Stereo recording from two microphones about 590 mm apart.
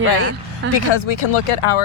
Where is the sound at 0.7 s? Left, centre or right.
Left.